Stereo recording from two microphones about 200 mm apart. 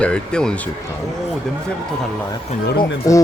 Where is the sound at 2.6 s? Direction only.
55° left (ahead or behind).